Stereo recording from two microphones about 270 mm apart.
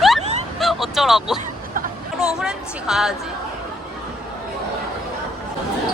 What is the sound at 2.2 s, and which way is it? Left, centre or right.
Speech, centre.